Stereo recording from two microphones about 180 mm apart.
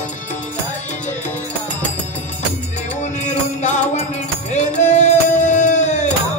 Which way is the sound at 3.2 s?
40° left (ahead or behind).